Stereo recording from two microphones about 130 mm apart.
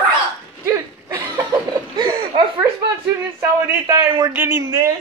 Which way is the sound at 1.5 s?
35° right (ahead or behind).